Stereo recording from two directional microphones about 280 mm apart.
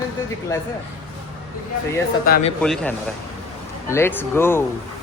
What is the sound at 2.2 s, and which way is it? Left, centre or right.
Speech, left.